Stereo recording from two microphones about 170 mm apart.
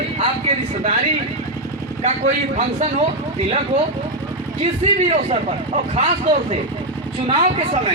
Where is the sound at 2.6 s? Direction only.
40° right (ahead or behind).